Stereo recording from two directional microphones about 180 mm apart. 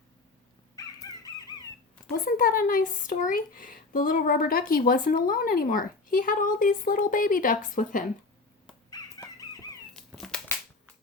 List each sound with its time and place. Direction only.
0.8 s chicken: 20° left (ahead or behind)
2.2 s speech: 50° left (ahead or behind)
8.9 s a sound: 20° left (ahead or behind)
10.1 s cat: centre (ahead or behind)